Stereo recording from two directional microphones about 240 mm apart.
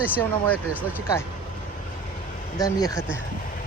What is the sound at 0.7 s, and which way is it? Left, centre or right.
Speech, centre.